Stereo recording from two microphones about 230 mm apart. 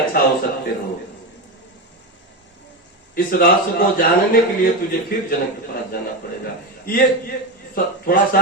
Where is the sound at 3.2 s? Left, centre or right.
Left.